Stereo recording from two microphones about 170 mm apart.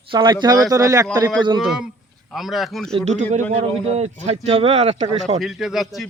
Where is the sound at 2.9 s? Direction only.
45° right (ahead or behind).